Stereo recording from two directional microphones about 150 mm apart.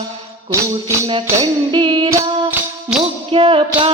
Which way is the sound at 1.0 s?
35° right (ahead or behind).